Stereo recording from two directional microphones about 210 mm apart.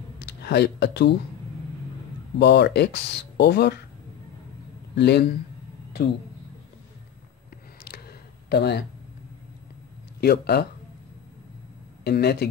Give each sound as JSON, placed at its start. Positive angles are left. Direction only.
{"t": 0.2, "sound": "speech", "side_deg": 55}
{"t": 2.3, "sound": "speech", "side_deg": 55}
{"t": 4.9, "sound": "speech", "side_deg": 50}
{"t": 8.5, "sound": "speech", "side_deg": 50}
{"t": 10.2, "sound": "speech", "side_deg": 50}
{"t": 12.0, "sound": "speech", "side_deg": 50}